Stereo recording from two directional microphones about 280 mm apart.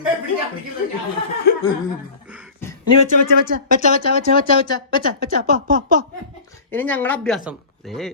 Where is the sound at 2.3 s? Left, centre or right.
Centre.